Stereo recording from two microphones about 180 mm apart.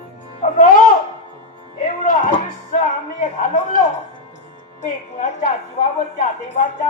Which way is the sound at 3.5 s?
45° left (ahead or behind).